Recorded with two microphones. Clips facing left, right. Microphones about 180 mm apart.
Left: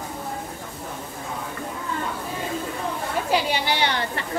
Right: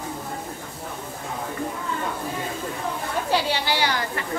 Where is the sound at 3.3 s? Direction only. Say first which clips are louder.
Even; 20° left (ahead or behind).